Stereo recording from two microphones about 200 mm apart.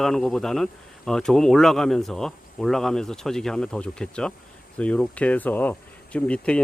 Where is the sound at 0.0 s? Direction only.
Centre (ahead or behind).